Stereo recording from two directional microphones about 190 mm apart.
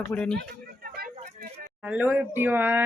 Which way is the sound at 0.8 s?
50° right (ahead or behind).